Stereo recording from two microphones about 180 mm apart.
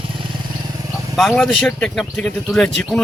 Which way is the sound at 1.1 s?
Centre (ahead or behind).